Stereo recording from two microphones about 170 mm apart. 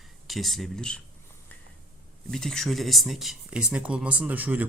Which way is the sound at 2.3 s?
5° left (ahead or behind).